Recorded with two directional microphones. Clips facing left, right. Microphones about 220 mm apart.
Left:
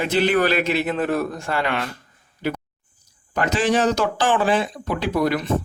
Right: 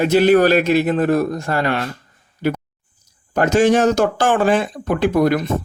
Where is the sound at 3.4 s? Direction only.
45° right (ahead or behind).